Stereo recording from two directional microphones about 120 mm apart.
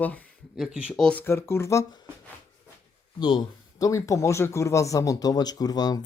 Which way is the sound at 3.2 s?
40° left (ahead or behind).